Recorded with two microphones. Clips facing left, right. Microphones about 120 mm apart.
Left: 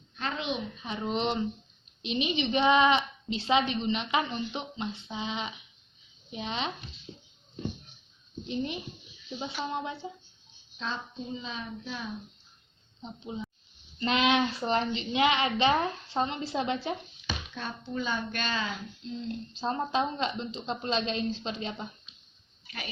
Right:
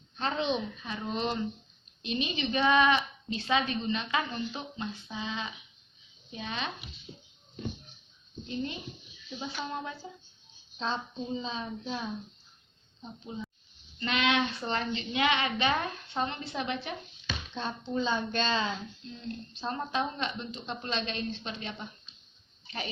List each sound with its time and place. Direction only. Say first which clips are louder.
0.2 s a woman's voice: right 3 dB; 30° right (ahead or behind)
0.9 s a woman's voice: left 4 dB; 20° left (ahead or behind)
8.4 s a woman's voice: left 2 dB; 20° left (ahead or behind)
10.8 s a woman's voice: right 3 dB; 30° right (ahead or behind)
13.0 s a woman's voice: left 2 dB; 25° left (ahead or behind)
17.5 s a woman's voice: right 6 dB; 25° right (ahead or behind)
19.0 s a woman's voice: left 9 dB; 25° left (ahead or behind)
22.6 s dog: right 4 dB; 30° right (ahead or behind)